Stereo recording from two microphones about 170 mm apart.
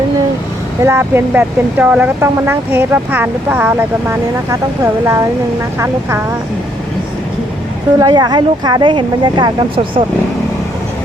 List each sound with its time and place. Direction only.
0.8 s speech: 15° right (ahead or behind)
7.9 s speech: 25° right (ahead or behind)